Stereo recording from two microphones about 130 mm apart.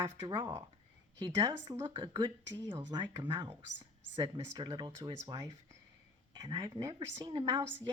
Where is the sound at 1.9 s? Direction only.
40° right (ahead or behind).